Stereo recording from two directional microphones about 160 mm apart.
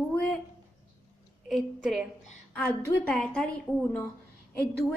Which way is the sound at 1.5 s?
Centre (ahead or behind).